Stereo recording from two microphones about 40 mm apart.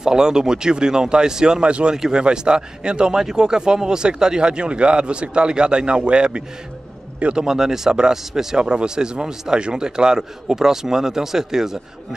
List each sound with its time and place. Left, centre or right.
0.0 s a man's voice: centre
7.3 s a man's voice: centre
8.5 s a man's voice: right